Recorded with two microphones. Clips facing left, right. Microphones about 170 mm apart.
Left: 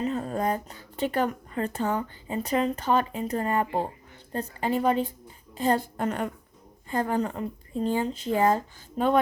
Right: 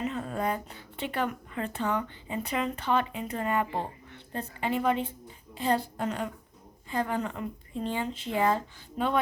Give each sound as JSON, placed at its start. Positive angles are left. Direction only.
{"t": 0.0, "sound": "a woman's voice", "side_deg": 40}